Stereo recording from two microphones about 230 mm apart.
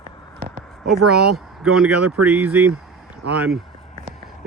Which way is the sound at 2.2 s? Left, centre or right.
Centre.